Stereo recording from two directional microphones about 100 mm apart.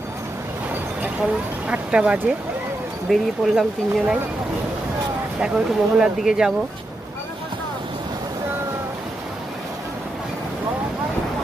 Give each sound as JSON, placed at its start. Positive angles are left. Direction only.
{"t": 1.2, "sound": "speech", "side_deg": -10}
{"t": 3.1, "sound": "speech", "side_deg": 0}
{"t": 5.4, "sound": "speech", "side_deg": -5}